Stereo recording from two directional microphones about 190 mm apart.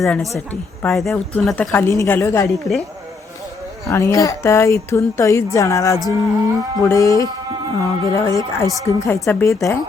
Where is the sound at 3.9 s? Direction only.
15° left (ahead or behind).